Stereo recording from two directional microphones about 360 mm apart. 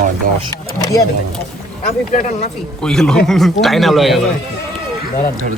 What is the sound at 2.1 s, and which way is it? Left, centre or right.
Speech, left.